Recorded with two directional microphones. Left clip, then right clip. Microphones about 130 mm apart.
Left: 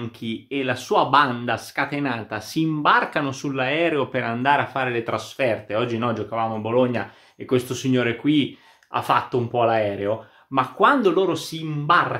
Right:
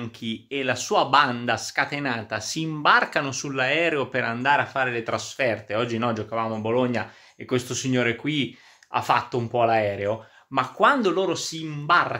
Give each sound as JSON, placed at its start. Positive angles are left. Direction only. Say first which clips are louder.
{"t": 0.2, "sound": "speech", "louder": "left 2 dB", "side_deg": -20}